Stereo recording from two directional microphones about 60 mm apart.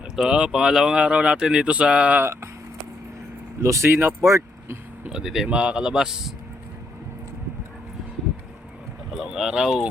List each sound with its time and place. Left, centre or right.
0.2 s speech: centre
2.2 s speech: right
3.6 s speech: right
5.0 s speech: centre
9.1 s speech: centre